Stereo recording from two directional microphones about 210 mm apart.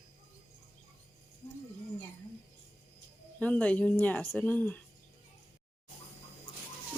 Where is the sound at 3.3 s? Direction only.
5° left (ahead or behind).